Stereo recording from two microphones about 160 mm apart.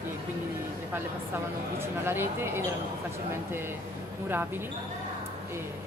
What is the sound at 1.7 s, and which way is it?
Speech, 15° right (ahead or behind).